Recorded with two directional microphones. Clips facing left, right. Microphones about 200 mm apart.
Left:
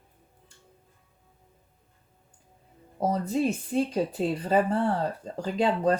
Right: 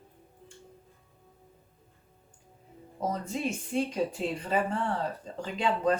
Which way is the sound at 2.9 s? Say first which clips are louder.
Left 6 dB; 35° left (ahead or behind).